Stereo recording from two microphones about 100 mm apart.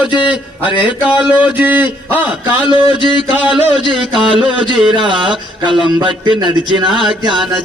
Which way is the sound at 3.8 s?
55° right (ahead or behind).